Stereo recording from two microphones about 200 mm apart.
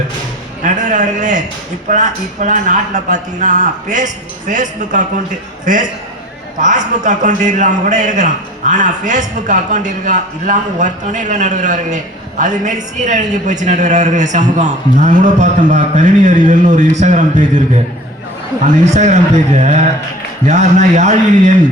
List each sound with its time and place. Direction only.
0.6 s speech: 40° right (ahead or behind)
6.6 s speech: 40° right (ahead or behind)
18.6 s speech: 35° right (ahead or behind)